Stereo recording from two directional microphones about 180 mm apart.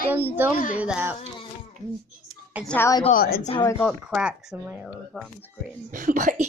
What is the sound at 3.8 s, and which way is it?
Speech, 5° right (ahead or behind).